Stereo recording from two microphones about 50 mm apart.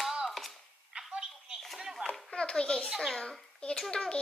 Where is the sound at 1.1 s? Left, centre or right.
Centre.